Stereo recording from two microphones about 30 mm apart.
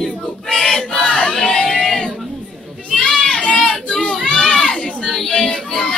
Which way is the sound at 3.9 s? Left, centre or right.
Left.